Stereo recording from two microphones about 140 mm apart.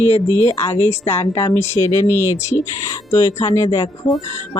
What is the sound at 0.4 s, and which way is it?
Speech, 20° left (ahead or behind).